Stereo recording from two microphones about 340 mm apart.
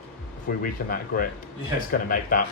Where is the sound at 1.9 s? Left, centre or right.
Left.